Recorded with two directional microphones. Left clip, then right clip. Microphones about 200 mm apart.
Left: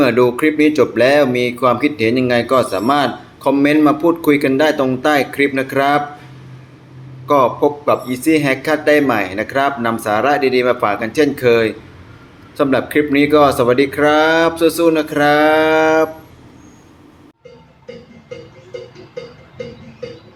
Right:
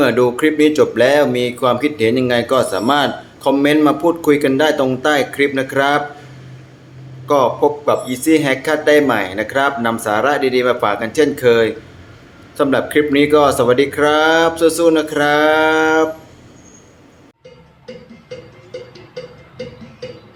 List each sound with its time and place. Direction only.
0.0 s speech: centre (ahead or behind)
7.3 s speech: centre (ahead or behind)